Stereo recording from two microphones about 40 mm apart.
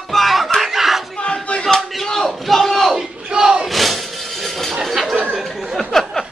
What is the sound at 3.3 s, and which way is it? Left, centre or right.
Battle cry, centre.